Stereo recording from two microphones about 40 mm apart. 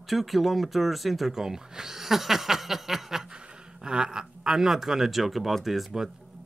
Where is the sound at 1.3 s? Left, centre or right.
Centre.